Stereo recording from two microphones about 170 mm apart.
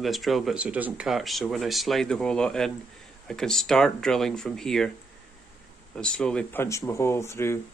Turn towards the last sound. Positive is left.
turn(degrees=15)  # may be behind; listen again after turning